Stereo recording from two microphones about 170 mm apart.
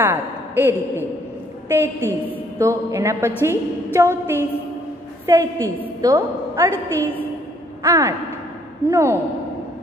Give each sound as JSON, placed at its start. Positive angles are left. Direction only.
{"t": 0.0, "sound": "a woman's voice", "side_deg": -10}
{"t": 6.7, "sound": "a woman's voice", "side_deg": 10}
{"t": 7.8, "sound": "speech", "side_deg": -20}